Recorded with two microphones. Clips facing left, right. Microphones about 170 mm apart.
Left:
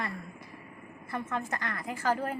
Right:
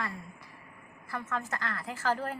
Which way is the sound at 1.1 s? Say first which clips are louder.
Left 2 dB; 20° left (ahead or behind).